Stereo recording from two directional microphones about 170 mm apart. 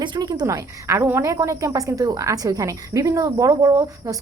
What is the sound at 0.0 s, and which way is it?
A woman's voice, 25° right (ahead or behind).